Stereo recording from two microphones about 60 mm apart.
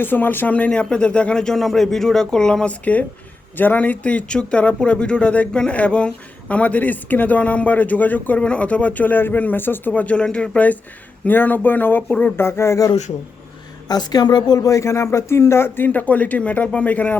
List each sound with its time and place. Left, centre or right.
0.0 s speech: left
0.5 s speech: centre
2.8 s speech: left
12.4 s speech: left
13.8 s speech: left
14.8 s speech: left